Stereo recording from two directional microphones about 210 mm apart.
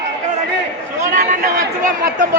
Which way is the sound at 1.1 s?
35° right (ahead or behind).